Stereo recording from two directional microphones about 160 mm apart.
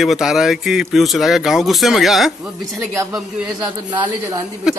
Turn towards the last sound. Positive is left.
turn(degrees=-5)  # may be behind; listen again after turning